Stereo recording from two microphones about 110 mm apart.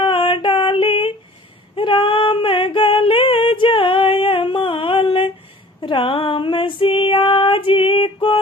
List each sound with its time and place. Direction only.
0.0 s female singing: 50° left (ahead or behind)